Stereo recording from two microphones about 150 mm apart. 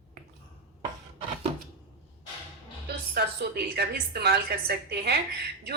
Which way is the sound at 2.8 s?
90° right.